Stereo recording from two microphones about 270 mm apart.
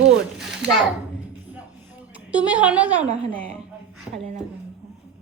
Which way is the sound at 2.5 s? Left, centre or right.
Centre.